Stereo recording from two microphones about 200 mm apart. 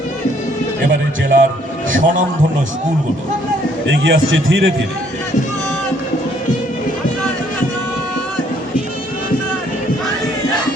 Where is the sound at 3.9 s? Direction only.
50° right (ahead or behind).